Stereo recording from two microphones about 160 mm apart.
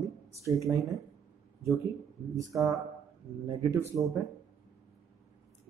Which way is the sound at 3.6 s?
20° right (ahead or behind).